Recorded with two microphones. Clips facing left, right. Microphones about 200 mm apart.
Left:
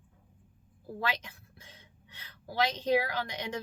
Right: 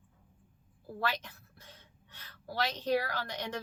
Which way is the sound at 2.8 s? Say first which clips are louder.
Left 2 dB; 20° left (ahead or behind).